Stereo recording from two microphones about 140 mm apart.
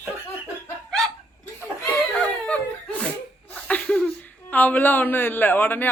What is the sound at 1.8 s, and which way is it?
Laughter, 10° left (ahead or behind).